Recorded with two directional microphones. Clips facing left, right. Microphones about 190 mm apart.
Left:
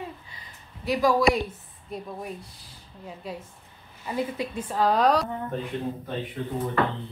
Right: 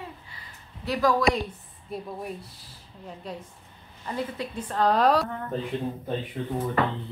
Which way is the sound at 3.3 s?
5° left (ahead or behind).